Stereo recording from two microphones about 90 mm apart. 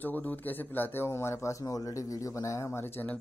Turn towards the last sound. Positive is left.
turn(degrees=20)  # may be behind; listen again after turning